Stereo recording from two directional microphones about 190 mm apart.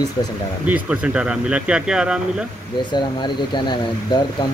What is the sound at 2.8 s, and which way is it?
Speech, 25° left (ahead or behind).